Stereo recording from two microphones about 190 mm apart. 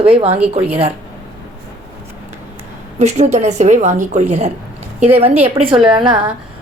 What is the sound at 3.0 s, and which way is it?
A woman's voice, 35° right (ahead or behind).